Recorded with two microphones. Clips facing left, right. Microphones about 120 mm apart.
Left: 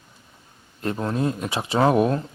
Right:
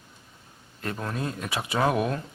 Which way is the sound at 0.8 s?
25° left (ahead or behind).